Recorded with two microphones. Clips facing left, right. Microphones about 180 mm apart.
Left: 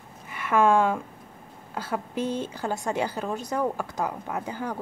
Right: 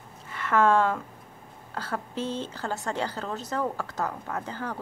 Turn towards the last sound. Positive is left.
turn(degrees=15)  # may be behind; listen again after turning